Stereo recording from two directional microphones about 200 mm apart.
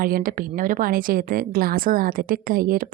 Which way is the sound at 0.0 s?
45° right (ahead or behind).